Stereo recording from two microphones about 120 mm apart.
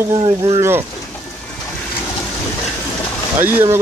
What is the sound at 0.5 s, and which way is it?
Speech, 20° right (ahead or behind).